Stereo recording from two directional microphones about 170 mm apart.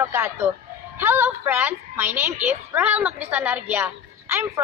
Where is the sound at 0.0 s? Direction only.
15° right (ahead or behind).